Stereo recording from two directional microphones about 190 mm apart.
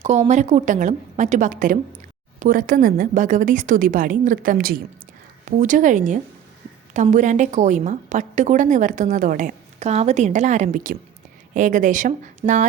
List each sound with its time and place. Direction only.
0.0 s a woman's voice: 35° right (ahead or behind)